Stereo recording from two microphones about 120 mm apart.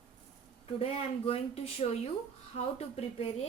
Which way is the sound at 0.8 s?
55° left (ahead or behind).